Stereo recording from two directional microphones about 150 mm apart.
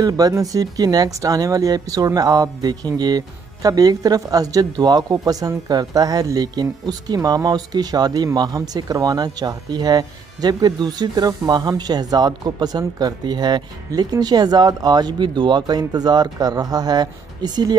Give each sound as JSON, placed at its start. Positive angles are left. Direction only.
{"t": 0.0, "sound": "speech", "side_deg": -25}